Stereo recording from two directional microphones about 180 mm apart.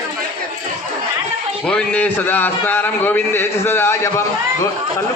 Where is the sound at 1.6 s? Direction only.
5° left (ahead or behind).